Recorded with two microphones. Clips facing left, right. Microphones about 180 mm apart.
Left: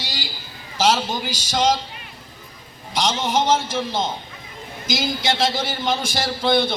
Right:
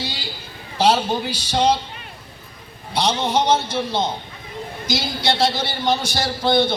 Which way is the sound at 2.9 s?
90° left.